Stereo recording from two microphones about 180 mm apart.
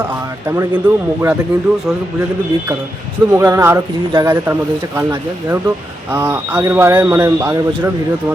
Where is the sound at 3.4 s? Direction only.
15° right (ahead or behind).